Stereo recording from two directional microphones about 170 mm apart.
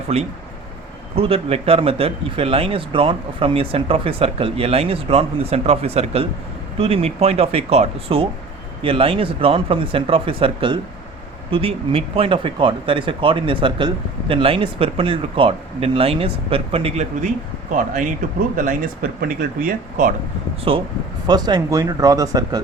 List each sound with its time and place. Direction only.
0.1 s speech: 35° right (ahead or behind)
18.5 s speech: 50° right (ahead or behind)
20.7 s speech: 30° right (ahead or behind)